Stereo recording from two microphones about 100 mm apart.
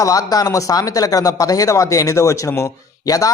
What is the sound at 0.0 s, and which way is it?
Speech, 35° left (ahead or behind).